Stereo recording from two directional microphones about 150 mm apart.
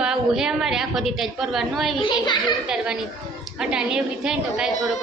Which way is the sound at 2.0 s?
30° left (ahead or behind).